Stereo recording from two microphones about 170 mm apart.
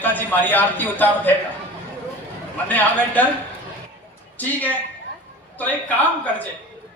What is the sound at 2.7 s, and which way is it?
Speech, 10° left (ahead or behind).